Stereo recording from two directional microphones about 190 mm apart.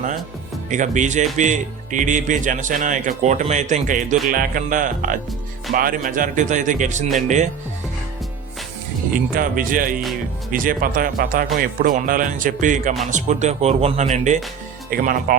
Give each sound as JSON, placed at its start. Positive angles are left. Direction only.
{"t": 0.7, "sound": "a man's voice", "side_deg": -40}
{"t": 9.3, "sound": "a man's voice", "side_deg": -45}
{"t": 14.8, "sound": "a man's voice", "side_deg": -50}